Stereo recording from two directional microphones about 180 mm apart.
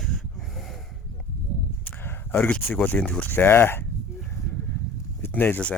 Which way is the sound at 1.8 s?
10° left (ahead or behind).